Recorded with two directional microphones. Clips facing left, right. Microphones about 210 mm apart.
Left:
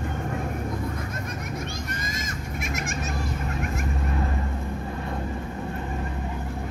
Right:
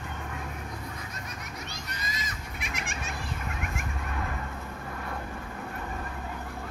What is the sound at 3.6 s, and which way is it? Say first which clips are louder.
Vehicle: left 7 dB; 35° left (ahead or behind).